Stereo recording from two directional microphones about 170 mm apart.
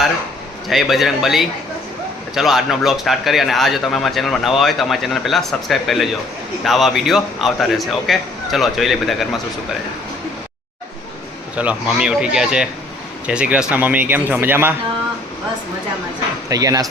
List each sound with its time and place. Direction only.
0.7 s a man's voice: centre (ahead or behind)
11.5 s a man's voice: 5° right (ahead or behind)
16.5 s speech: 20° right (ahead or behind)